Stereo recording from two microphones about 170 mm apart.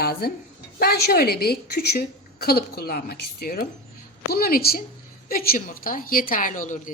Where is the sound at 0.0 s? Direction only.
65° left (ahead or behind).